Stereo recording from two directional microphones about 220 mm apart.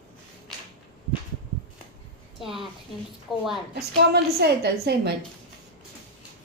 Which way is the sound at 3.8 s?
45° right (ahead or behind).